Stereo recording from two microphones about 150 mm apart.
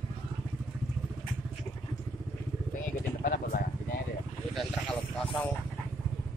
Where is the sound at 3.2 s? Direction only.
70° left (ahead or behind).